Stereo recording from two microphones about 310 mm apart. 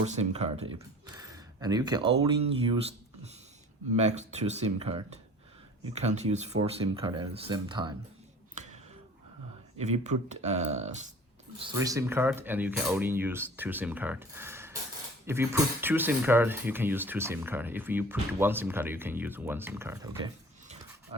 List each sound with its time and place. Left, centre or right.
0.0 s speech: right
3.9 s speech: right
8.5 s a sound: right
9.7 s speech: right
11.6 s speech: centre